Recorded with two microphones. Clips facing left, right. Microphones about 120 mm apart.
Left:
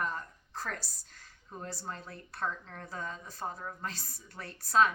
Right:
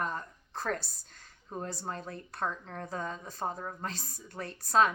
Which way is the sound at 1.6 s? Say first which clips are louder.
Even; 20° right (ahead or behind).